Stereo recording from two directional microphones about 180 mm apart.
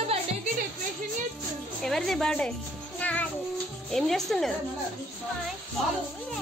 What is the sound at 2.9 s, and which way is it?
Music, 10° left (ahead or behind).